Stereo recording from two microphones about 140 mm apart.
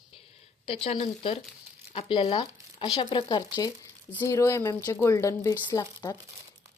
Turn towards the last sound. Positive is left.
turn(degrees=25)  # may be behind; listen again after turning